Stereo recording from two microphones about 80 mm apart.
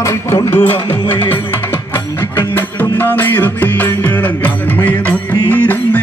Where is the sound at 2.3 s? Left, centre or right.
Left.